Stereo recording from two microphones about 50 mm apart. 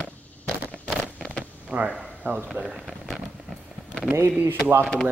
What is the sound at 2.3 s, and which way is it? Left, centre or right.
Speech, right.